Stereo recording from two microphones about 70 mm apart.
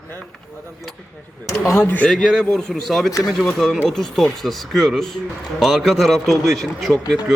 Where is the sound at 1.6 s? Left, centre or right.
Left.